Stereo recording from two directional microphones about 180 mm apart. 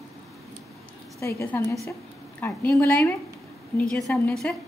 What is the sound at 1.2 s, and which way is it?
A woman's voice, 15° left (ahead or behind).